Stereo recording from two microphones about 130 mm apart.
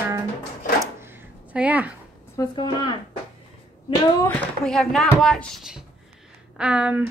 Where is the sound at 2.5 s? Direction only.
35° left (ahead or behind).